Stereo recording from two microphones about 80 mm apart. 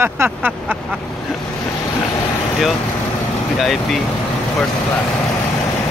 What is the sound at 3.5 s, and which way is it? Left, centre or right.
Speech, centre.